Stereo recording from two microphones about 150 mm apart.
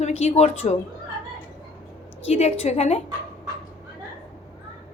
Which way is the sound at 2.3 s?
45° left (ahead or behind).